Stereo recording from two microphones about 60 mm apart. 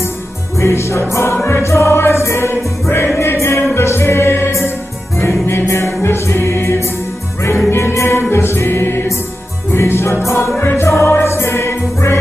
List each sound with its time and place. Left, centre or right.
0.6 s music: left